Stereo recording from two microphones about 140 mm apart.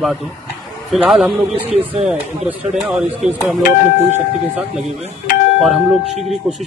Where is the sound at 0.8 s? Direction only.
5° right (ahead or behind).